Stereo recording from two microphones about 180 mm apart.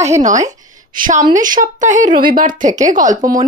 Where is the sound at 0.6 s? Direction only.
45° right (ahead or behind).